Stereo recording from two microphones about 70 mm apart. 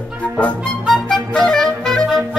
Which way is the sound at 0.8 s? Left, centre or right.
Centre.